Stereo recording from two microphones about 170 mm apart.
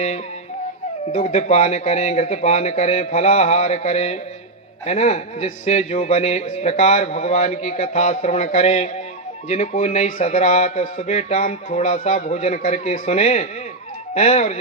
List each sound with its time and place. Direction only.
1.1 s a man's voice: 45° left (ahead or behind)